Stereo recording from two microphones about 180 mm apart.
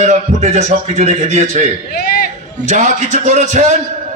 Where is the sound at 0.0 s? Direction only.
40° right (ahead or behind).